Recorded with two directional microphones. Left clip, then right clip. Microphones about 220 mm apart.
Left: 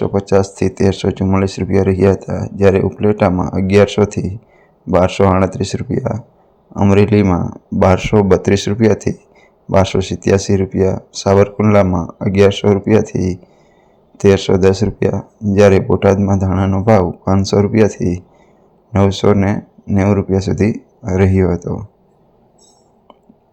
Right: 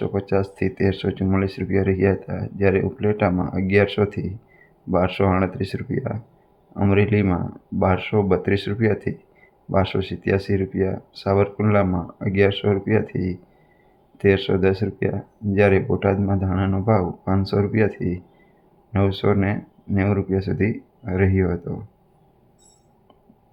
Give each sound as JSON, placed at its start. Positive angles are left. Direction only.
{"t": 0.0, "sound": "speech", "side_deg": 25}